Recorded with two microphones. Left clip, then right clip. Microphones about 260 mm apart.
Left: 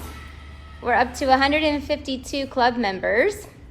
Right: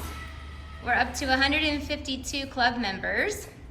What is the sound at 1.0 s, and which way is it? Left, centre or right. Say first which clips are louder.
A woman's voice: left 7 dB; centre.